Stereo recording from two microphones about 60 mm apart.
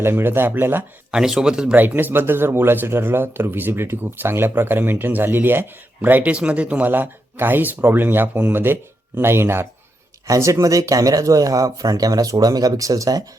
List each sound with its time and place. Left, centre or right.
0.0 s speech: right
1.1 s a man's voice: centre
1.7 s speech: right
6.8 s speech: right
10.2 s speech: right